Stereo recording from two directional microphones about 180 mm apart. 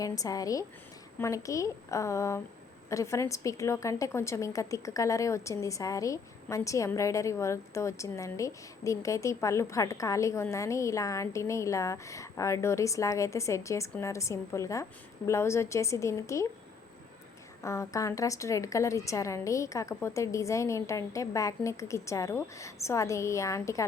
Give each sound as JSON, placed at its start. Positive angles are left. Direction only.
{"t": 0.0, "sound": "a woman's voice", "side_deg": 20}
{"t": 17.6, "sound": "a woman's voice", "side_deg": 15}